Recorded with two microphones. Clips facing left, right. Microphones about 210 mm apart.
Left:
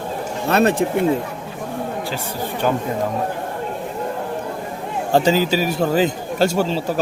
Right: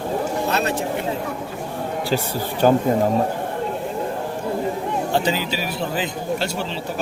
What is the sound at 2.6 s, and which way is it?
Speech, 40° right (ahead or behind).